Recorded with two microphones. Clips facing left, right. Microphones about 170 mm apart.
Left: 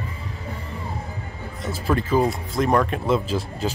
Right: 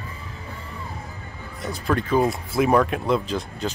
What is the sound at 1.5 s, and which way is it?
Speech, 5° left (ahead or behind).